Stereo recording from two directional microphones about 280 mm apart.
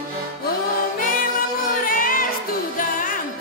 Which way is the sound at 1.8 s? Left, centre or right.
Left.